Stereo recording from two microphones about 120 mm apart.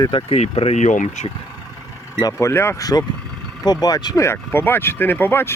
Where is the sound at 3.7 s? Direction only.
35° left (ahead or behind).